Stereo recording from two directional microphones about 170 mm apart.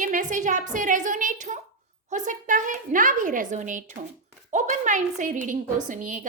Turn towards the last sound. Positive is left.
turn(degrees=-50)  # may be behind; listen again after turning